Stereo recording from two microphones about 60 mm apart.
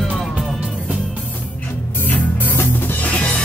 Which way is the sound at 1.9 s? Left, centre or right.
Left.